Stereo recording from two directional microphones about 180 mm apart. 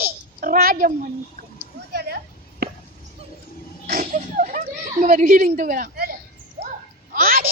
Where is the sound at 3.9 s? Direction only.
45° right (ahead or behind).